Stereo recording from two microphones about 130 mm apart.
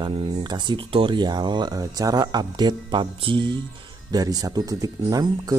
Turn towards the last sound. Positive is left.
turn(degrees=-30)  # may be behind; listen again after turning